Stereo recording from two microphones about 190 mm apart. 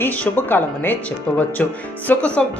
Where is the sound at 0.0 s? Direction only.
10° left (ahead or behind).